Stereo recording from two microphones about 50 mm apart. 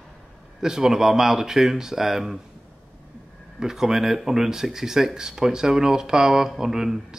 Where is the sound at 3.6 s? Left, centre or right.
Centre.